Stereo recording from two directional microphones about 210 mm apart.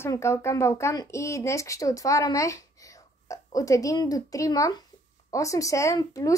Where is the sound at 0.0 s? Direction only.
15° left (ahead or behind).